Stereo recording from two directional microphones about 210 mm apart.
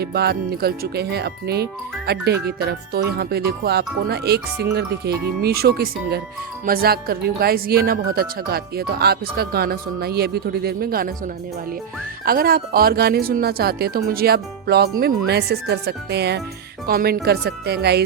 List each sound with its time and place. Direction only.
0.0 s speech: 50° right (ahead or behind)
12.2 s speech: 45° right (ahead or behind)